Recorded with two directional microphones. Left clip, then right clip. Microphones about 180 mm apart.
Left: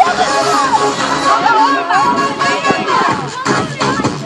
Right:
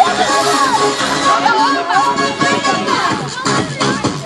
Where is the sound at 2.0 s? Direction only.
50° right (ahead or behind).